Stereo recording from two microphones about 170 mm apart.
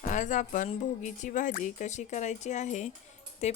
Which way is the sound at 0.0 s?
45° left (ahead or behind).